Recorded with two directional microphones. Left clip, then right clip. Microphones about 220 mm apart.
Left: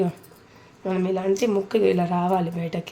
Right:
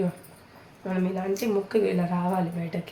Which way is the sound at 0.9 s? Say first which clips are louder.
Left 5 dB; 45° left (ahead or behind).